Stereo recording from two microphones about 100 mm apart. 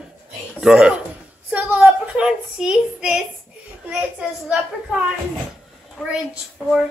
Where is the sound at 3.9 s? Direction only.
10° right (ahead or behind).